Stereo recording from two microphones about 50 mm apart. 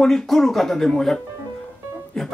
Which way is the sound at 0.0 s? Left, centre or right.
Centre.